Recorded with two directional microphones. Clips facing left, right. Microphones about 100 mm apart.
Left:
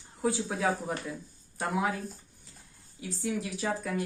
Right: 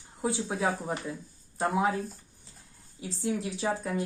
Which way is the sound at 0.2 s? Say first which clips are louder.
Even; 20° right (ahead or behind).